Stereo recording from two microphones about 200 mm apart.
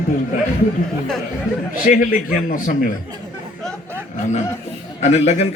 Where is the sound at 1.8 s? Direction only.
40° left (ahead or behind).